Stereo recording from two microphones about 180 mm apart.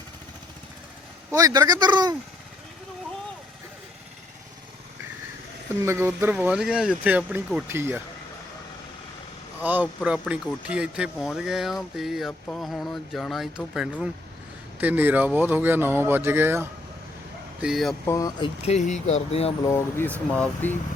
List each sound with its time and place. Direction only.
1.3 s a man's voice: 20° right (ahead or behind)
5.8 s speech: 15° right (ahead or behind)
9.6 s speech: 10° right (ahead or behind)
17.6 s speech: centre (ahead or behind)
18.0 s speech: 20° left (ahead or behind); by 19.5 s 35° left (ahead or behind)
19.6 s speech: 15° left (ahead or behind)